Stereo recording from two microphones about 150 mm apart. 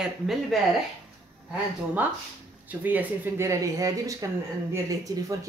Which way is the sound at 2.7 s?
10° right (ahead or behind).